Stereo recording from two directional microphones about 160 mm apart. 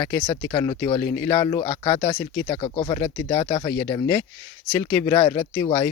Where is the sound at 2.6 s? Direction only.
30° left (ahead or behind).